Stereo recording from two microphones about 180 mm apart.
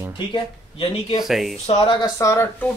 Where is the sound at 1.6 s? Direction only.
25° left (ahead or behind).